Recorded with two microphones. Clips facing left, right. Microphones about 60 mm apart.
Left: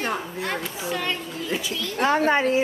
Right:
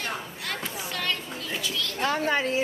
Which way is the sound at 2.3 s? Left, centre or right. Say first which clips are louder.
Left 5 dB; left.